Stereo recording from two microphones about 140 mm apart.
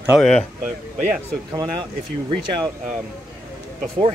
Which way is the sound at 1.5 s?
30° right (ahead or behind).